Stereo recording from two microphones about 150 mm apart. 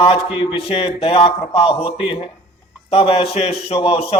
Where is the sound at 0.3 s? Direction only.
35° left (ahead or behind).